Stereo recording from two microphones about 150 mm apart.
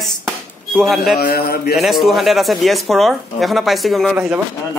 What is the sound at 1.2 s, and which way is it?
Speech, 90° left.